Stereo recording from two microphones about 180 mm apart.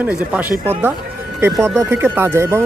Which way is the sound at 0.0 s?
10° right (ahead or behind).